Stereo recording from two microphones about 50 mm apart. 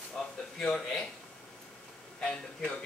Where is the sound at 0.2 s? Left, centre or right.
Centre.